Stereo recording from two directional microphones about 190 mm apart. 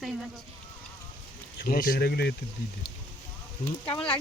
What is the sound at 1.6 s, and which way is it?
Speech, 50° left (ahead or behind).